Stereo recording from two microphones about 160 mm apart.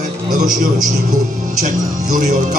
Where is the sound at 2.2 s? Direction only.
50° right (ahead or behind).